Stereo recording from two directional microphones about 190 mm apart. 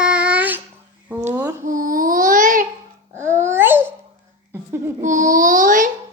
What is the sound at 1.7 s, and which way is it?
Babbling, 45° right (ahead or behind).